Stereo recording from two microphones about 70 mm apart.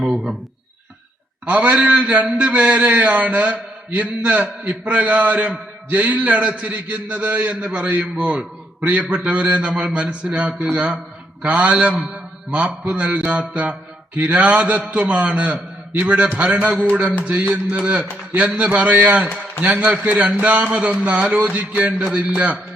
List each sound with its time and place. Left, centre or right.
0.0 s speech: centre
1.5 s a man's voice: right